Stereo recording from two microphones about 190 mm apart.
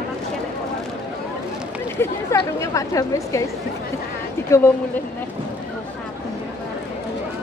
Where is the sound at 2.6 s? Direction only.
15° left (ahead or behind).